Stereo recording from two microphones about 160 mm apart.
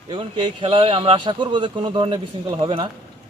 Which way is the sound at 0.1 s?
30° right (ahead or behind).